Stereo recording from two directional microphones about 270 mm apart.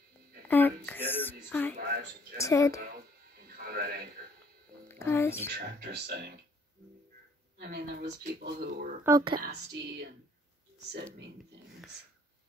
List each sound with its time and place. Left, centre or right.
0.5 s speech: centre
2.8 s a sound: right
4.8 s speech: centre
5.6 s speech: right
7.5 s speech: right
9.0 s speech: centre
9.3 s speech: right